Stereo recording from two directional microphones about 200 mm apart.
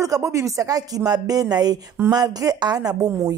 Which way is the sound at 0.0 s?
15° right (ahead or behind).